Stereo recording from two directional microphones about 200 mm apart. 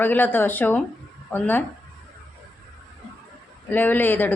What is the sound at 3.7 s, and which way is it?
Speech, 10° left (ahead or behind).